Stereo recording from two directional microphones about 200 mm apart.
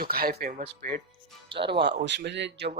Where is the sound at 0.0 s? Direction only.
50° right (ahead or behind).